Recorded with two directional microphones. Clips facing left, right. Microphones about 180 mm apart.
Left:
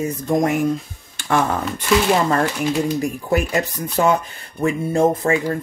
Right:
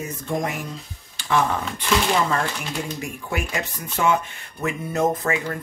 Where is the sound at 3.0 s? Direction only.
40° left (ahead or behind).